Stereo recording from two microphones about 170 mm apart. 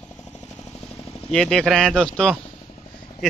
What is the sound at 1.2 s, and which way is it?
Speech, 5° left (ahead or behind).